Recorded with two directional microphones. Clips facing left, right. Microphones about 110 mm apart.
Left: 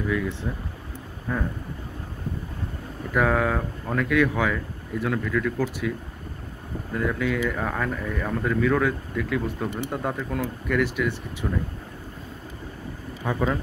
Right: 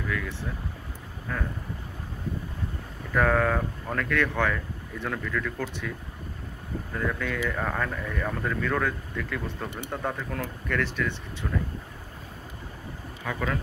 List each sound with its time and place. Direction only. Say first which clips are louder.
0.1 s speech: left 5 dB; 20° left (ahead or behind)
3.2 s speech: left 1 dB; 5° left (ahead or behind)
13.2 s speech: left 5 dB; 25° left (ahead or behind)